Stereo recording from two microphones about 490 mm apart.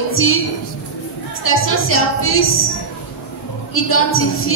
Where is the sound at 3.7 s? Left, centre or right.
Left.